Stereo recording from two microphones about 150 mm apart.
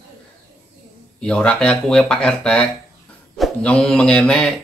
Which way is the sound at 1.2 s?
5° left (ahead or behind).